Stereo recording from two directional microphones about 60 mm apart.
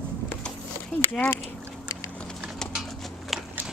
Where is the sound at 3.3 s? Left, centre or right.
Centre.